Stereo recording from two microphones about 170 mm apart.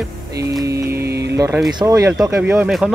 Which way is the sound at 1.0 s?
70° right (ahead or behind).